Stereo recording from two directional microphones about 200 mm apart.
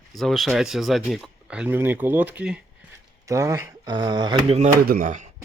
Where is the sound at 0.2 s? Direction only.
Centre (ahead or behind); by 4.7 s 30° right (ahead or behind).